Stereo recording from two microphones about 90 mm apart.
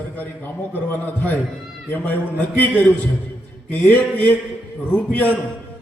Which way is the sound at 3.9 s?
20° left (ahead or behind).